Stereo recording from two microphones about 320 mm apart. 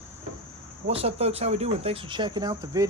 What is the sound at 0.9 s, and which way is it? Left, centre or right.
Speech, centre.